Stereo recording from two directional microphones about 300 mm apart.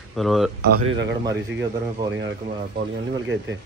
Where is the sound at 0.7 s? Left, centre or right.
Right.